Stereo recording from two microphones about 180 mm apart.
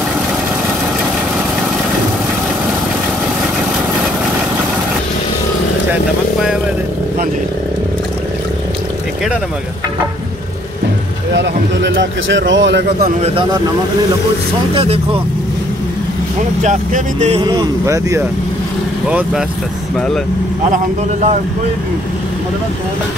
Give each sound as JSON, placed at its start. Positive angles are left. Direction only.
{"t": 11.3, "sound": "a sound", "side_deg": -85}
{"t": 13.2, "sound": "speech", "side_deg": -30}
{"t": 14.7, "sound": "speech", "side_deg": -30}
{"t": 16.6, "sound": "speech", "side_deg": -40}
{"t": 17.4, "sound": "speech", "side_deg": -20}
{"t": 19.0, "sound": "speech", "side_deg": -5}
{"t": 20.7, "sound": "speech", "side_deg": -40}